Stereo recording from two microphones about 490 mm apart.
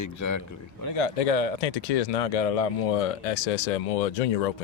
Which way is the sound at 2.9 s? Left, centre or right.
Left.